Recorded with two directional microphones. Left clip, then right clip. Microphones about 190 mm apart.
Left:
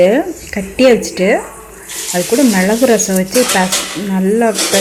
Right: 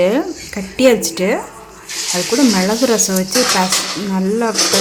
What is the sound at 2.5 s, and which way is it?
Speech, 5° left (ahead or behind).